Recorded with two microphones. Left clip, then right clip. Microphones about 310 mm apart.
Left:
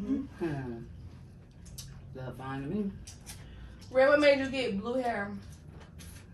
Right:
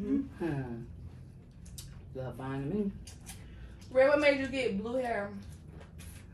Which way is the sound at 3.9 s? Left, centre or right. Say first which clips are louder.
Left 2 dB; centre.